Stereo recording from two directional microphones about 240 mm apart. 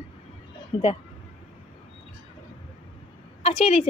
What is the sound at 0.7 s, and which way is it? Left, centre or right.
Speech, left.